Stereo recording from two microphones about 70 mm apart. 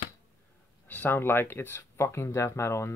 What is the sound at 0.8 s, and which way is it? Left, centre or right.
Speech, left.